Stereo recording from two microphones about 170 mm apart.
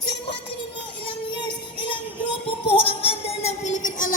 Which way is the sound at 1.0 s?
30° left (ahead or behind).